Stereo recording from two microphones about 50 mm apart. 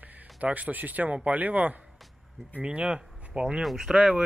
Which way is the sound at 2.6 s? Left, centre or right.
Right.